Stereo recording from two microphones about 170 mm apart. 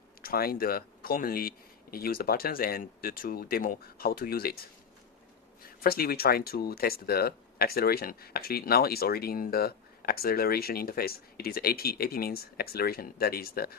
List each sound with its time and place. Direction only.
0.2 s speech: 60° left (ahead or behind)
5.8 s speech: 65° left (ahead or behind)